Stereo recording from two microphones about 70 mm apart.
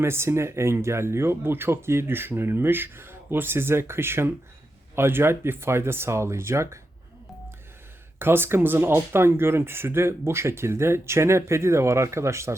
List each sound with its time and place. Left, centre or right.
0.0 s speech: right
8.2 s speech: right